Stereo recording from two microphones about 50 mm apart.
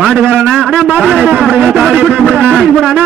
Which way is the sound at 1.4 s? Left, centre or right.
Centre.